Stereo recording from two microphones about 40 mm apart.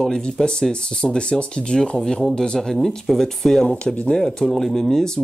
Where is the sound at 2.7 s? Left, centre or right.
Centre.